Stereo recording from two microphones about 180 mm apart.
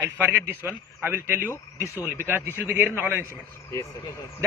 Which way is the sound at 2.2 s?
10° right (ahead or behind).